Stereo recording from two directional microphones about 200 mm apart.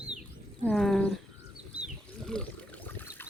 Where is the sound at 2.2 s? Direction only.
5° left (ahead or behind).